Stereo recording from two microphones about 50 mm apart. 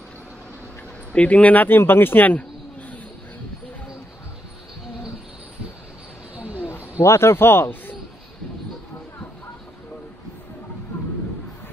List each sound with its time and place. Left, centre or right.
1.1 s speech: left
6.3 s a sound: right
6.7 s a man's voice: left